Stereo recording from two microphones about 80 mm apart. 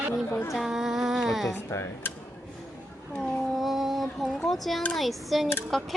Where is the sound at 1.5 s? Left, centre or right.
Left.